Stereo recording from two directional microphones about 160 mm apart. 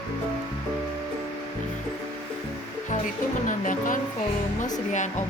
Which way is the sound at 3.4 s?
55° left (ahead or behind).